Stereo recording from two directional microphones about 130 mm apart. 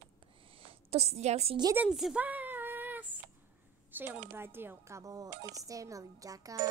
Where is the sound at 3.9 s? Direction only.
15° right (ahead or behind).